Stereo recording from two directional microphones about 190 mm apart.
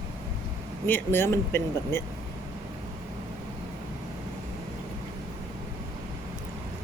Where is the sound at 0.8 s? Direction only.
10° left (ahead or behind).